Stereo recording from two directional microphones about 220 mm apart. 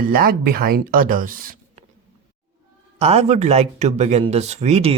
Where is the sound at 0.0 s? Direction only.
40° right (ahead or behind).